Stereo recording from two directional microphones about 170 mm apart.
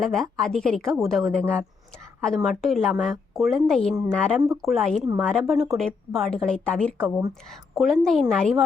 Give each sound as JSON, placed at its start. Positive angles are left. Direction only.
{"t": 0.0, "sound": "a woman's voice", "side_deg": 0}